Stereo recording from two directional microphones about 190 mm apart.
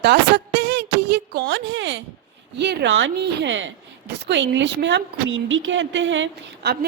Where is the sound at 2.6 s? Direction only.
65° right (ahead or behind).